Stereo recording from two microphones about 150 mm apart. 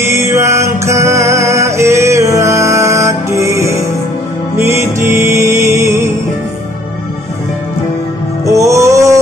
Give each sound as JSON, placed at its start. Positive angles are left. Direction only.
{"t": 0.0, "sound": "music", "side_deg": -20}
{"t": 8.5, "sound": "music", "side_deg": -20}